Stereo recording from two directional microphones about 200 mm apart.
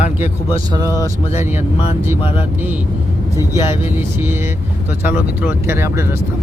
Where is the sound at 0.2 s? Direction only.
15° right (ahead or behind).